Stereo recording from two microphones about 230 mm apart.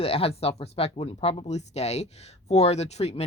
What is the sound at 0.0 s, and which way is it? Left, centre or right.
Speech, left.